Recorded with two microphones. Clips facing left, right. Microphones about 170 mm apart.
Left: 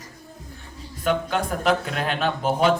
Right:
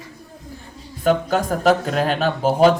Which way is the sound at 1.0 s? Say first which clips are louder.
Right 5 dB; 40° right (ahead or behind).